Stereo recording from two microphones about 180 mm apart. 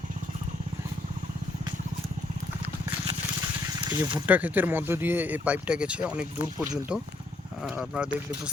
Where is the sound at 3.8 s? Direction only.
25° right (ahead or behind).